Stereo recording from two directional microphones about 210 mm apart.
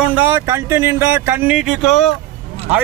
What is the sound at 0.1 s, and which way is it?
Speech, 10° right (ahead or behind).